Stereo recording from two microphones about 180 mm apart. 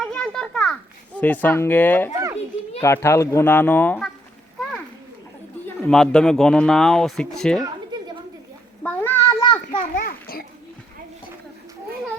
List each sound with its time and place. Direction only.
0.0 s children playing: 5° left (ahead or behind)
2.8 s speech: 15° left (ahead or behind)
5.6 s speech: 5° left (ahead or behind)
8.8 s a sound: 10° left (ahead or behind)
9.7 s children playing: 50° left (ahead or behind)